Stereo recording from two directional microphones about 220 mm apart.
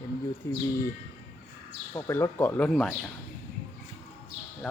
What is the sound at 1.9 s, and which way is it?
Speech, 15° left (ahead or behind).